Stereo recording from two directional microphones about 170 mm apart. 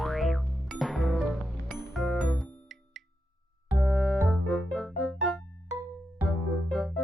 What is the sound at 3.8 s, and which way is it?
Music, centre (ahead or behind).